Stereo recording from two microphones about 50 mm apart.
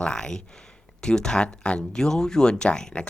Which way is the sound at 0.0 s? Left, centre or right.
Centre.